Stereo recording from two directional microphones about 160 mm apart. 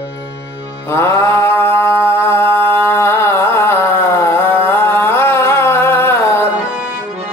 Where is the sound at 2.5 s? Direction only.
15° left (ahead or behind).